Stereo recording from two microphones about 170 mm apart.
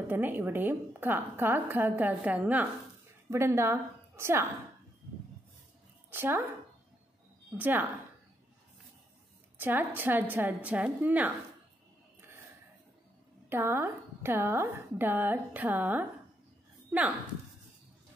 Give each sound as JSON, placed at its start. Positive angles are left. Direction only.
{"t": 0.1, "sound": "a woman's voice", "side_deg": -10}
{"t": 6.0, "sound": "speech", "side_deg": -15}
{"t": 7.5, "sound": "a woman's voice", "side_deg": -10}
{"t": 9.6, "sound": "a woman's voice", "side_deg": -10}
{"t": 13.5, "sound": "a woman's voice", "side_deg": -15}